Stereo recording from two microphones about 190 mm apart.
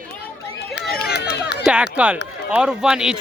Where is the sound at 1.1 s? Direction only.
60° left (ahead or behind).